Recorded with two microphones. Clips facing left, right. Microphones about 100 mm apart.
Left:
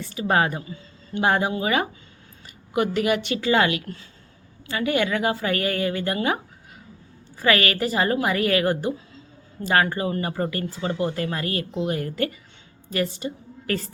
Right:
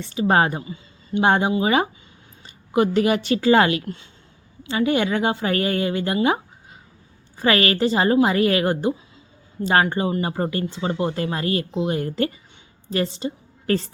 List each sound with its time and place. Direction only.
0.0 s a woman's voice: 30° right (ahead or behind)
7.3 s a woman's voice: 30° right (ahead or behind)